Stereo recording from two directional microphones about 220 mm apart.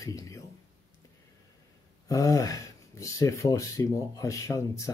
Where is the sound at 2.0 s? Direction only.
15° left (ahead or behind).